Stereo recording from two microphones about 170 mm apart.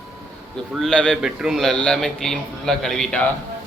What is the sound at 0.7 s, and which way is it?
A man's voice, 5° left (ahead or behind).